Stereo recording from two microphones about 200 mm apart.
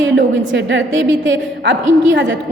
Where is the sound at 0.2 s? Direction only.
65° right (ahead or behind).